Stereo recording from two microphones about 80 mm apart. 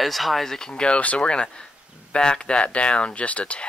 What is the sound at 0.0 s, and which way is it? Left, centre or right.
Speech, centre.